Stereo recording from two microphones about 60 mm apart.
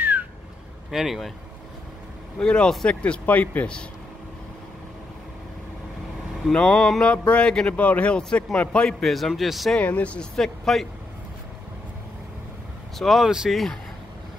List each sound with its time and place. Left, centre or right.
0.0 s a sound: right
0.9 s speech: centre
2.3 s a man's voice: centre
6.5 s a man's voice: centre
9.0 s speech: centre
9.8 s a man's voice: left
10.3 s speech: centre
13.0 s speech: centre